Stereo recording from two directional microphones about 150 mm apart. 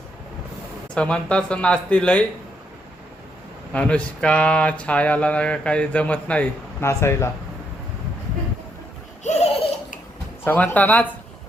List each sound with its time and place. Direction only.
0.9 s speech: 5° left (ahead or behind)
3.7 s speech: 10° left (ahead or behind)
9.2 s laughter: 45° left (ahead or behind)
10.4 s speech: 15° left (ahead or behind)